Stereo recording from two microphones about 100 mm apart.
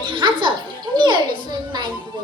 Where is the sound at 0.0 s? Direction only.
55° right (ahead or behind).